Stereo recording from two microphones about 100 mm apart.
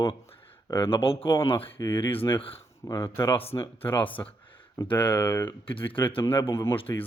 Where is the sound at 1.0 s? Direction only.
65° left (ahead or behind).